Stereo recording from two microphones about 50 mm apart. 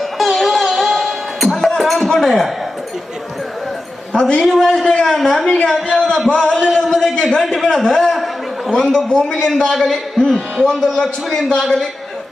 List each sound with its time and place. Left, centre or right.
0.2 s music: centre
1.8 s speech: centre
4.1 s a man's voice: centre
4.4 s a man's voice: centre
5.5 s a man's voice: left
6.8 s a sound: centre
8.7 s a man's voice: centre
10.9 s a man's voice: centre